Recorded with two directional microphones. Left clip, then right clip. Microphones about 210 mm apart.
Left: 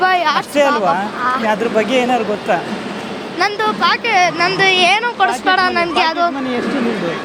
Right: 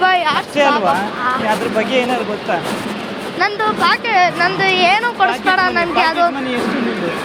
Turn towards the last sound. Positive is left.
turn(degrees=50)  # may be behind; listen again after turning